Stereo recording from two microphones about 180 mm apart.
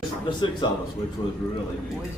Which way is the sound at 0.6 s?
25° left (ahead or behind).